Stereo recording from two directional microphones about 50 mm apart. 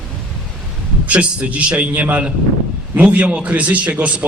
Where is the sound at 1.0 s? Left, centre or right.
Right.